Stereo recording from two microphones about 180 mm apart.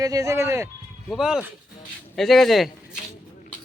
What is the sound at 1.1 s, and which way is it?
Speech, 5° right (ahead or behind).